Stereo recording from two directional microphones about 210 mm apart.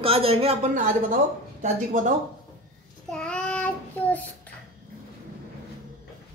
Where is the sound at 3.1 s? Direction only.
5° left (ahead or behind).